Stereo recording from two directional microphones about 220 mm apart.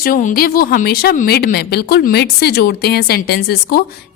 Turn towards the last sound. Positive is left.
turn(degrees=45)  # may be behind; listen again after turning